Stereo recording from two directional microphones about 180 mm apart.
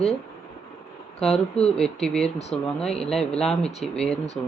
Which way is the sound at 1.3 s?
35° left (ahead or behind).